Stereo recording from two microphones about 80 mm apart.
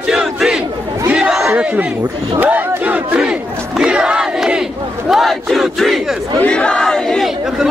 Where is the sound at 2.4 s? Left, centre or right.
Centre.